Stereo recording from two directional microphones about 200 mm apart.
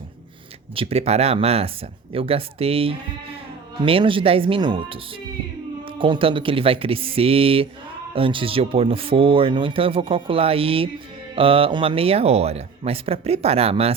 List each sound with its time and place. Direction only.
0.8 s speech: 30° right (ahead or behind)
6.0 s speech: 25° right (ahead or behind)